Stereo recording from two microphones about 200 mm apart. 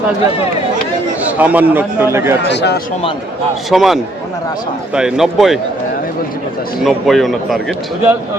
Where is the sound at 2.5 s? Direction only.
60° left (ahead or behind).